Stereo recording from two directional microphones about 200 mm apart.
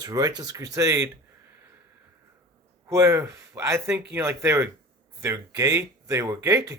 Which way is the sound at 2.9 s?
15° right (ahead or behind).